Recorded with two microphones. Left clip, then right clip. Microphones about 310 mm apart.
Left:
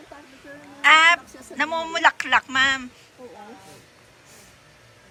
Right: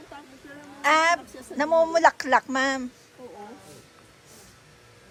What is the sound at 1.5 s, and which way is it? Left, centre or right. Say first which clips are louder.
Speech: right 4 dB; centre.